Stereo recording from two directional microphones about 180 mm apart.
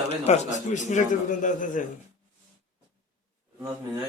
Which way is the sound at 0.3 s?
40° left (ahead or behind).